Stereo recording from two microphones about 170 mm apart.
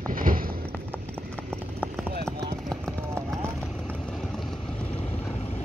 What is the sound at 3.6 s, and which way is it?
Vehicle, 5° left (ahead or behind).